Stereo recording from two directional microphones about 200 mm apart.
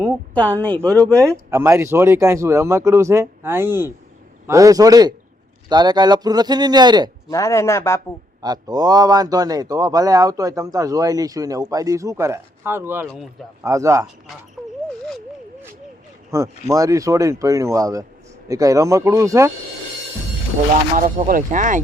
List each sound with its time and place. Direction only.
0.3 s speech: 5° left (ahead or behind)
0.9 s a man's voice: 15° right (ahead or behind)
7.3 s speech: 15° left (ahead or behind)
8.4 s a man's voice: 20° right (ahead or behind)
16.3 s a man's voice: 15° right (ahead or behind)
20.9 s speech: 40° right (ahead or behind)